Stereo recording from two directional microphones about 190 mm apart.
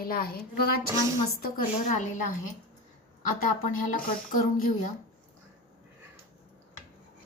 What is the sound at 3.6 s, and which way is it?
Speech, 45° left (ahead or behind).